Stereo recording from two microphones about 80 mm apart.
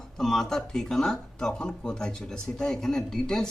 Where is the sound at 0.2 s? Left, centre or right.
Centre.